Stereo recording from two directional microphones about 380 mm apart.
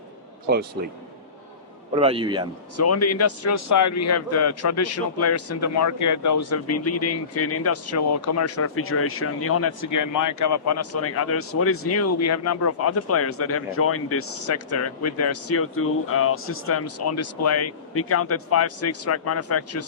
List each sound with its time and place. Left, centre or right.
2.0 s a man's voice: centre
2.7 s a man's voice: left